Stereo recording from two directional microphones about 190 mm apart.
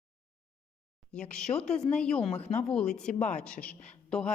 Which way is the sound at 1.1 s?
5° left (ahead or behind).